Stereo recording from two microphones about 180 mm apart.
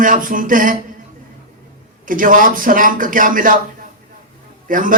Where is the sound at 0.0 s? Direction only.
50° right (ahead or behind).